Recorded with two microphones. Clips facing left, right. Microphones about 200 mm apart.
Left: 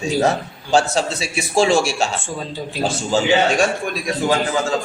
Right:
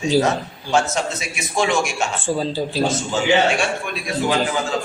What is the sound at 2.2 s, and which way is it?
Speech, 30° right (ahead or behind).